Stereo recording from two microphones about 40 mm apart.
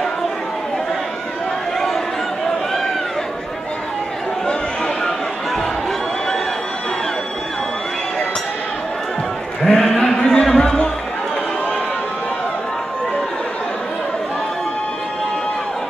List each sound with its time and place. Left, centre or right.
4.5 s chatter: centre
9.6 s a sound: centre
10.4 s music: centre